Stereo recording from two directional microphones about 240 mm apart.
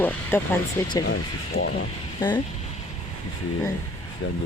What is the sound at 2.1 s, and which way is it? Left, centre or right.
Speech, centre.